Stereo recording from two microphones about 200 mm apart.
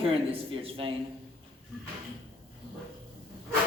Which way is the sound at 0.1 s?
25° right (ahead or behind).